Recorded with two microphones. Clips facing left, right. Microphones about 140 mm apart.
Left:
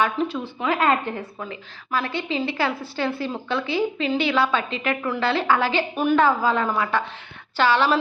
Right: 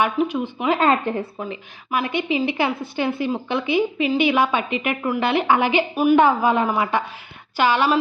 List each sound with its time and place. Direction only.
0.0 s a woman's voice: 15° right (ahead or behind)
6.1 s a woman's voice: 20° right (ahead or behind)